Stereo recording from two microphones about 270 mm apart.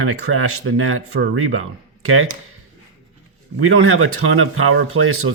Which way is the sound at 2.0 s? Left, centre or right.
Right.